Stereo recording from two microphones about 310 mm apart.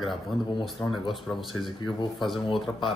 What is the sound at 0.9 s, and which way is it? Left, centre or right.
Speech, centre.